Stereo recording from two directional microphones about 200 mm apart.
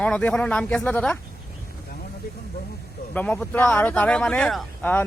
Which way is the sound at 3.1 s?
5° left (ahead or behind).